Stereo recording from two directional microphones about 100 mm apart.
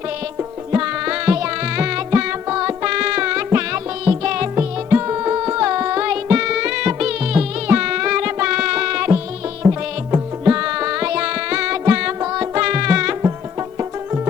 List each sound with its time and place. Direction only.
0.3 s music: 20° right (ahead or behind)
4.5 s music: 25° right (ahead or behind)
13.6 s music: 30° right (ahead or behind)